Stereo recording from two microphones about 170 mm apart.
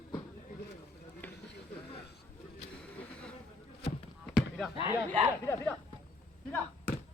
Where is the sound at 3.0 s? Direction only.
5° left (ahead or behind).